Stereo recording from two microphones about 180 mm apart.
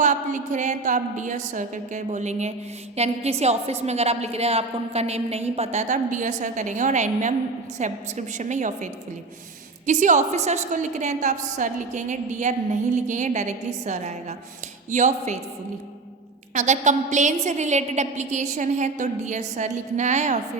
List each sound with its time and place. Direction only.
0.0 s a woman's voice: 45° right (ahead or behind)
16.6 s a woman's voice: 40° right (ahead or behind)